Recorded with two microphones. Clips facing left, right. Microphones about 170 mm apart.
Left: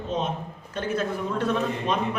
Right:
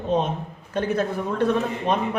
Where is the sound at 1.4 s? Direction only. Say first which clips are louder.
Right 4 dB; 55° right (ahead or behind).